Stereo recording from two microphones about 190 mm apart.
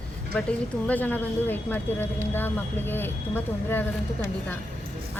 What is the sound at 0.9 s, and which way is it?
A woman's voice, 10° left (ahead or behind).